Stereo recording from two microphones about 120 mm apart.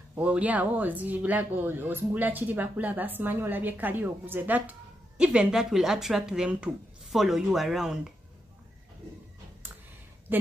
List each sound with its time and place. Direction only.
0.1 s speech: 10° right (ahead or behind)